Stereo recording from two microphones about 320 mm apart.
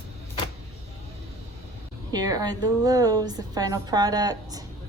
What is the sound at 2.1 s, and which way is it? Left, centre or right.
A woman's voice, centre.